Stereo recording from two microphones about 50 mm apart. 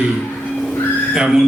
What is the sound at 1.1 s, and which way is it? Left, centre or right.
Speech, centre.